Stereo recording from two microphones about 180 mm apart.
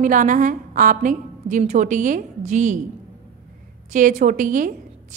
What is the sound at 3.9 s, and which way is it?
Speech, 45° right (ahead or behind).